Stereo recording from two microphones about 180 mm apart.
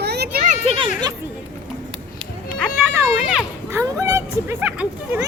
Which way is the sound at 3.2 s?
5° right (ahead or behind).